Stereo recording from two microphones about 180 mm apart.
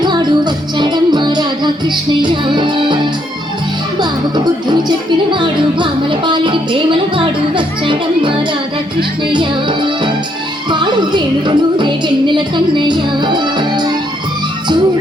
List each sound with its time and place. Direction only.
0.0 s music: 25° right (ahead or behind)
4.7 s music: 25° right (ahead or behind)